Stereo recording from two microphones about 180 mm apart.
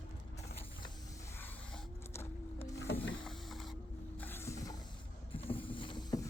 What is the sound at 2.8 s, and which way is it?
Power windows, 80° left.